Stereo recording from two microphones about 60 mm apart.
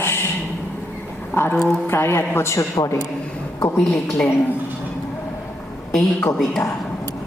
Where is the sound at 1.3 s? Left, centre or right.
Left.